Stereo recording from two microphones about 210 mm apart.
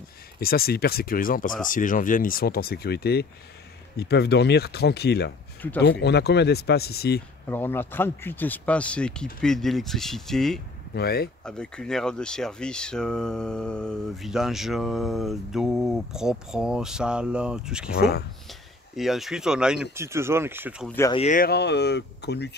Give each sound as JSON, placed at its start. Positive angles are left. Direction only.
{"t": 0.4, "sound": "speech", "side_deg": 45}
{"t": 7.4, "sound": "speech", "side_deg": 10}
{"t": 11.0, "sound": "speech", "side_deg": 45}
{"t": 11.4, "sound": "speech", "side_deg": 5}
{"t": 17.9, "sound": "speech", "side_deg": 50}
{"t": 18.5, "sound": "speech", "side_deg": 0}
{"t": 21.1, "sound": "speech", "side_deg": 30}
{"t": 21.4, "sound": "speech", "side_deg": 50}